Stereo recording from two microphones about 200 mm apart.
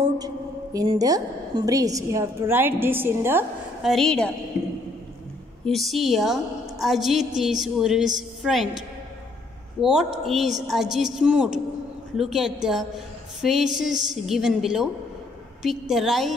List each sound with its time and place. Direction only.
0.7 s a woman's voice: 20° right (ahead or behind)
3.9 s a woman's voice: 5° left (ahead or behind)
5.7 s a woman's voice: centre (ahead or behind)